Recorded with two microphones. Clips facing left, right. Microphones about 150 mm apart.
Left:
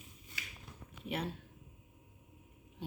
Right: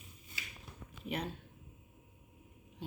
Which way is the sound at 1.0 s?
5° left (ahead or behind).